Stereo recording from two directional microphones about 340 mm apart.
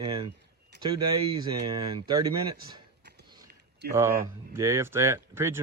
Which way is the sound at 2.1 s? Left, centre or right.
Centre.